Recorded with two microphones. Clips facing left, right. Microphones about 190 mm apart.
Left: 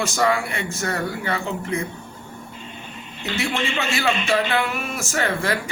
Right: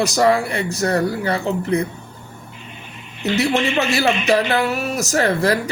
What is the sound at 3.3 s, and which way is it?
A man's voice, 40° right (ahead or behind).